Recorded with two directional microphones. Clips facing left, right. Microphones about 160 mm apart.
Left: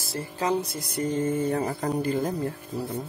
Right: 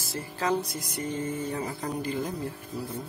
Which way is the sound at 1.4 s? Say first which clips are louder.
Left 6 dB; 50° left (ahead or behind).